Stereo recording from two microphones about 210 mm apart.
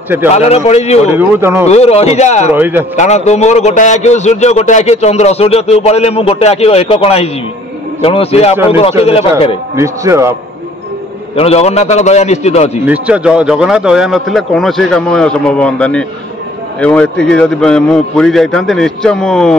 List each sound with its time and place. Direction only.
0.3 s a man's voice: 30° left (ahead or behind)
1.1 s speech: 10° right (ahead or behind)
1.7 s a man's voice: 30° left (ahead or behind)
2.5 s speech: 10° right (ahead or behind)
3.0 s a man's voice: 30° left (ahead or behind)
9.8 s speech: 15° right (ahead or behind)
11.3 s a man's voice: 30° left (ahead or behind)
12.8 s speech: 5° right (ahead or behind)